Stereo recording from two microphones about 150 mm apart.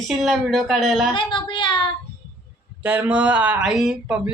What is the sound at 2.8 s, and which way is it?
Speech, 10° right (ahead or behind).